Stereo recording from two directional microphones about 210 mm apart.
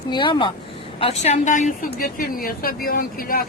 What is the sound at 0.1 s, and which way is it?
A woman's voice, 20° left (ahead or behind).